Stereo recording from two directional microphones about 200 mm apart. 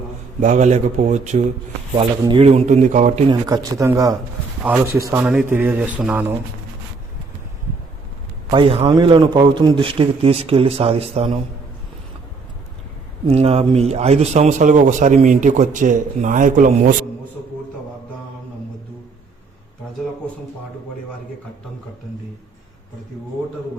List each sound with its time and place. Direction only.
0.3 s a man's voice: 40° right (ahead or behind)
3.2 s a man's voice: 20° right (ahead or behind)
8.4 s a man's voice: 25° right (ahead or behind)
13.2 s a man's voice: 30° right (ahead or behind)